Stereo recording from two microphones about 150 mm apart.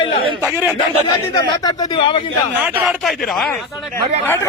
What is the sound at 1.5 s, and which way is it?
Speech, 25° left (ahead or behind).